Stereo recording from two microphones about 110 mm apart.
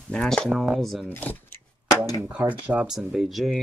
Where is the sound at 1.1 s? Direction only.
15° left (ahead or behind).